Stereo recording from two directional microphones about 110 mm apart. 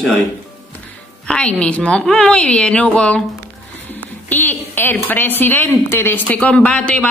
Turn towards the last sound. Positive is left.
turn(degrees=10)  # may be behind; listen again after turning